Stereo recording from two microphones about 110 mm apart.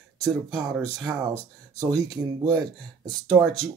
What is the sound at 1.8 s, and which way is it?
Speech, 35° right (ahead or behind).